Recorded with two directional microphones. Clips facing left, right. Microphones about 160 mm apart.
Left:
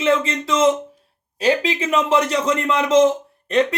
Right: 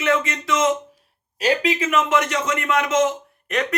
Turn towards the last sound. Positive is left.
turn(degrees=30)  # may be behind; listen again after turning